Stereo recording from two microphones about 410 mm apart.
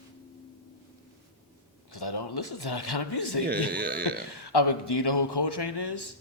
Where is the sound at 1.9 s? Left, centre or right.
Left.